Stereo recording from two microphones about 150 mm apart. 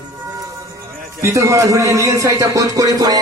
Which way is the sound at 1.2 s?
20° right (ahead or behind).